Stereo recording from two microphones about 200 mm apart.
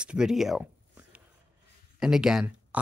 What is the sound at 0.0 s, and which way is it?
Speech, 5° right (ahead or behind).